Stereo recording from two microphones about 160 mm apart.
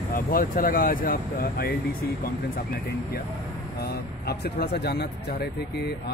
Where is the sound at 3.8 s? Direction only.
80° left.